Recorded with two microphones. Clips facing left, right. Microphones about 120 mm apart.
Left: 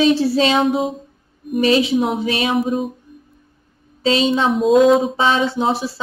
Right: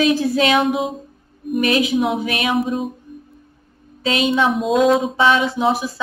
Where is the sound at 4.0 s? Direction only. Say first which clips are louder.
Left 1 dB; 30° left (ahead or behind).